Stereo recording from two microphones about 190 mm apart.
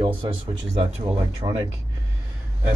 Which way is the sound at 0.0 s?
25° right (ahead or behind).